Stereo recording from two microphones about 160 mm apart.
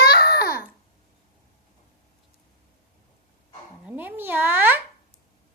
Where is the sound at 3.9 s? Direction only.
10° right (ahead or behind).